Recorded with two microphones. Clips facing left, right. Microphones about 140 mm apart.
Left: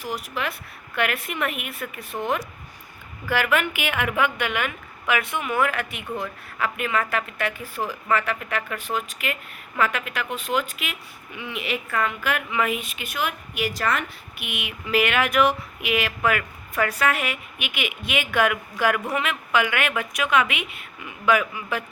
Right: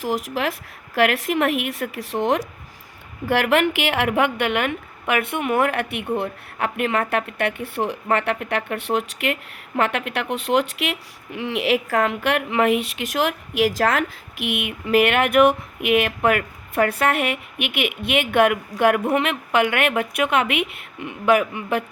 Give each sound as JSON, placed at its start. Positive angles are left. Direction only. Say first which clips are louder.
{"t": 0.0, "sound": "a woman's voice", "louder": "right 6 dB", "side_deg": -90}
{"t": 3.2, "sound": "a woman's voice", "louder": "right 5 dB", "side_deg": -60}